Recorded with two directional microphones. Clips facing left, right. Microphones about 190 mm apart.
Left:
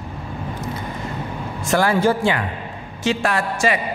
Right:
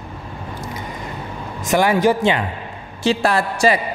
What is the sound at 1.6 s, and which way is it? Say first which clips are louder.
Speech: right 2 dB; 15° right (ahead or behind).